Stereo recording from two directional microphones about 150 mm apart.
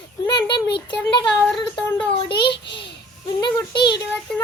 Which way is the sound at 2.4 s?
30° left (ahead or behind).